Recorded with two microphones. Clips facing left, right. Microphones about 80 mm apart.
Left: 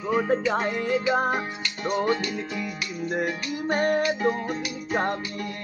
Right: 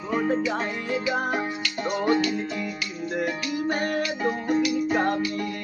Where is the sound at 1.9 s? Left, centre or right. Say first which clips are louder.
Right 1 dB; centre.